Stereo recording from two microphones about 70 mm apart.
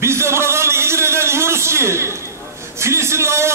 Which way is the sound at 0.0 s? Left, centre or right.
Right.